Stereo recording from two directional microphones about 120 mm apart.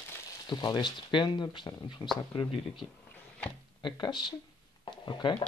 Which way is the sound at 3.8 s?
40° left (ahead or behind).